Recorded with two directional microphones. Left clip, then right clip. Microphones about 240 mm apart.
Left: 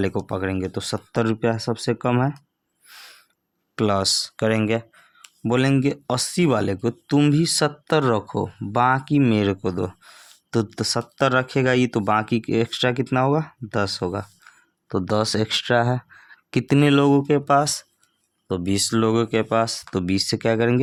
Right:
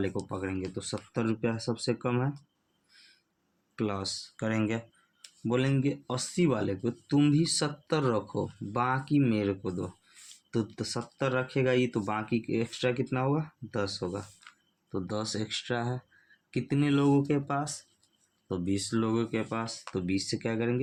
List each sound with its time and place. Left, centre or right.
0.0 s speech: left
2.9 s owl: left
3.8 s speech: left
5.5 s speech: left